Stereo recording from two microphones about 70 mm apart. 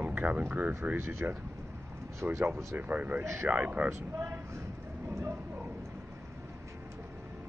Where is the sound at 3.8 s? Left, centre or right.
Right.